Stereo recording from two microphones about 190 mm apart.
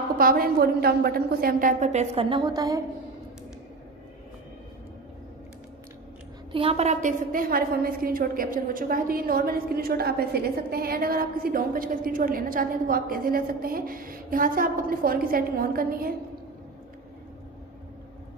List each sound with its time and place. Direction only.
0.2 s a woman's voice: 50° right (ahead or behind); by 2.8 s 20° right (ahead or behind)
6.5 s a woman's voice: 30° right (ahead or behind); by 16.2 s 50° right (ahead or behind)